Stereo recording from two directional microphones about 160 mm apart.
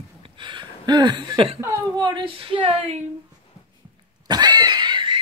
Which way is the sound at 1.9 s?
30° right (ahead or behind).